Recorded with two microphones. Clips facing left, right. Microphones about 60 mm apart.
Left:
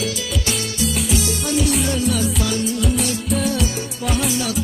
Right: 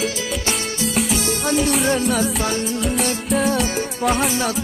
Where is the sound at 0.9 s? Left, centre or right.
Right.